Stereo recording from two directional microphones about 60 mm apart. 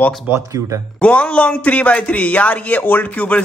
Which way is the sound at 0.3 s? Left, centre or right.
Right.